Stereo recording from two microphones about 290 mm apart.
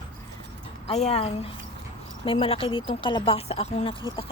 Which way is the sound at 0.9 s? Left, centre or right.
Left.